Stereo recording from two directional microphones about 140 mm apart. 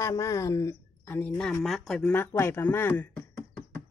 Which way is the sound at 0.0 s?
25° left (ahead or behind).